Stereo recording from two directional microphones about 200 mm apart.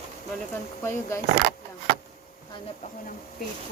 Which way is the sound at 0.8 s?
15° left (ahead or behind).